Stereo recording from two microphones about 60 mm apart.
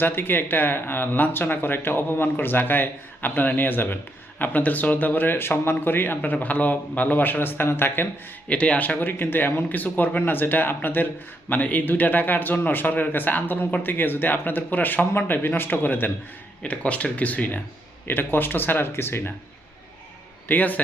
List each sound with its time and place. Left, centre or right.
0.0 s speech: left
8.4 s speech: centre; by 16.1 s left
16.6 s speech: left
20.5 s speech: left